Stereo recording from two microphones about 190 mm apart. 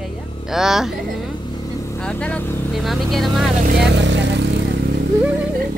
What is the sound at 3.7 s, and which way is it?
Vehicle, 65° right (ahead or behind).